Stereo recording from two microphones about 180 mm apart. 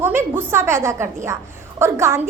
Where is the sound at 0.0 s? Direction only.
10° right (ahead or behind).